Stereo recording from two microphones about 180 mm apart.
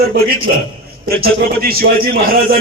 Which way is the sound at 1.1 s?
55° right (ahead or behind).